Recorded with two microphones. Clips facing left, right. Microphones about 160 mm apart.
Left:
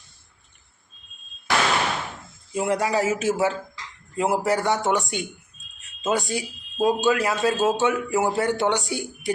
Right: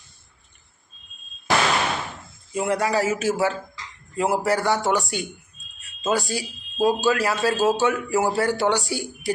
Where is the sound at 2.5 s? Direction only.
25° left (ahead or behind).